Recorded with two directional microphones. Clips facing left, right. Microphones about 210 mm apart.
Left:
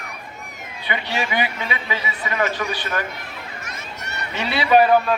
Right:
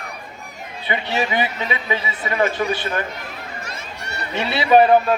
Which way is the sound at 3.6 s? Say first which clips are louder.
Right 2 dB; 30° right (ahead or behind).